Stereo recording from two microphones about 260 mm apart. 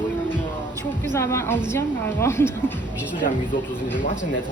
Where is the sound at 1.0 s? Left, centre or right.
Centre.